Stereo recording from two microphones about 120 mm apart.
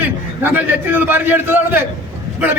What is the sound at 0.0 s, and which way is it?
A man's voice, 15° right (ahead or behind).